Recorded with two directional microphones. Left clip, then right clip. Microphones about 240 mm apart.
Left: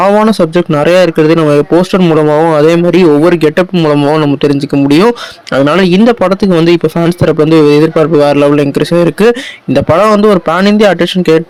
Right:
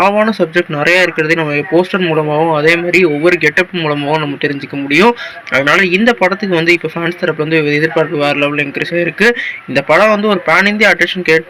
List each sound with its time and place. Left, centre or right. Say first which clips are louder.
0.0 s speech: left 4 dB; left